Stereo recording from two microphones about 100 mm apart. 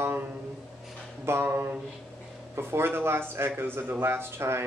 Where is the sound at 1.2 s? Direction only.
25° right (ahead or behind).